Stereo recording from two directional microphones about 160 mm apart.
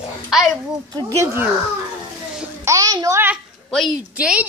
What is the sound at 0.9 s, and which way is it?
Speech, 20° right (ahead or behind).